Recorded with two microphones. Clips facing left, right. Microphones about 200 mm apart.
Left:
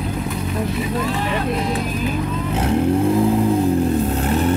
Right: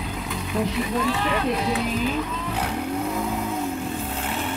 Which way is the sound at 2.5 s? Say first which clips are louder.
Left 10 dB; 25° left (ahead or behind).